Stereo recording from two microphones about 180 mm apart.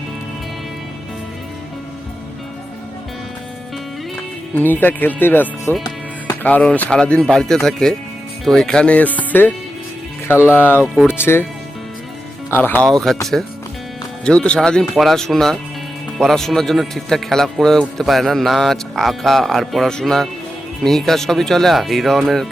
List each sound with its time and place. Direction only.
4.5 s speech: 10° left (ahead or behind)
12.5 s speech: 10° left (ahead or behind)